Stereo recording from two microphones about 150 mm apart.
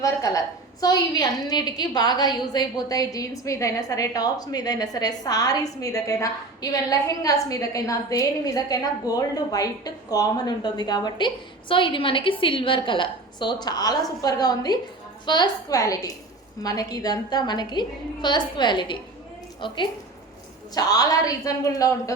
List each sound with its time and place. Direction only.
0.0 s a woman's voice: 25° left (ahead or behind)